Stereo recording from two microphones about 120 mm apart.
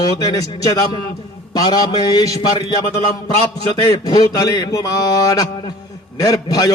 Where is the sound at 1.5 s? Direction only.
35° left (ahead or behind).